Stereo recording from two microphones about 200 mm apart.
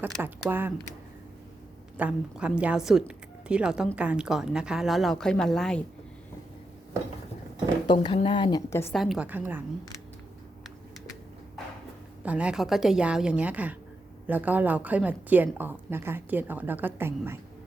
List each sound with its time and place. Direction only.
0.0 s a woman's voice: 10° right (ahead or behind)
2.0 s a woman's voice: 5° right (ahead or behind)
7.9 s a woman's voice: 25° left (ahead or behind)
8.9 s a woman's voice: centre (ahead or behind)
12.2 s a woman's voice: 5° right (ahead or behind)